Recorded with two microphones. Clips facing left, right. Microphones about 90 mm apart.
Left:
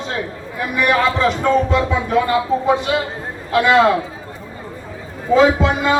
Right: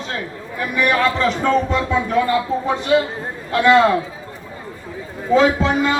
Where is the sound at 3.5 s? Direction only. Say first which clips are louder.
Even; 5° left (ahead or behind).